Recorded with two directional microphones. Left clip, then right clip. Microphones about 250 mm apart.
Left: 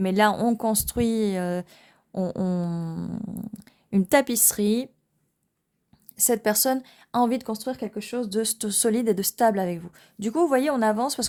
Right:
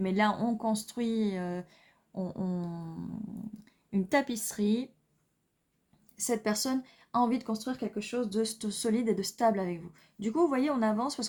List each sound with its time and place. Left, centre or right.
0.0 s speech: left
6.1 s speech: left